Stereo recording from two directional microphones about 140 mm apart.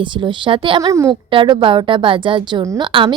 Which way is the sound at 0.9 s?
20° right (ahead or behind).